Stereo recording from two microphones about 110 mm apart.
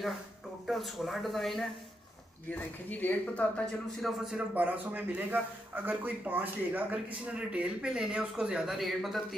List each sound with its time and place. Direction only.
0.7 s speech: centre (ahead or behind)
2.5 s speech: 15° left (ahead or behind)
4.0 s speech: 5° right (ahead or behind)
4.6 s speech: 15° right (ahead or behind)